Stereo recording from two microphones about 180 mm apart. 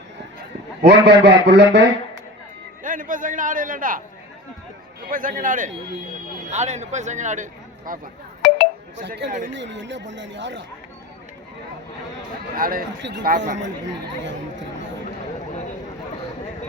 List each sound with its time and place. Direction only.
0.8 s a man's voice: 65° right (ahead or behind)
2.8 s a man's voice: 45° right (ahead or behind)
5.1 s a man's voice: 50° right (ahead or behind)
9.0 s a man's voice: 75° right (ahead or behind)
12.5 s a man's voice: 50° right (ahead or behind)
13.0 s a man's voice: 75° right (ahead or behind)
13.2 s a man's voice: 45° right (ahead or behind)